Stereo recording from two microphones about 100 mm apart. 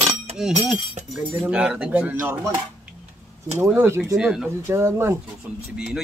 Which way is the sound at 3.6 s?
25° right (ahead or behind).